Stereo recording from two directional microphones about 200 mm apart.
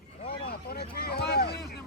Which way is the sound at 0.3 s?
50° left (ahead or behind).